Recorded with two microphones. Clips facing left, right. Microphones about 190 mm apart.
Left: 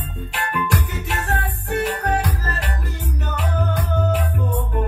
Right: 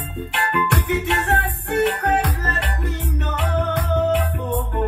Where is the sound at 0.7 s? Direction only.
60° right (ahead or behind).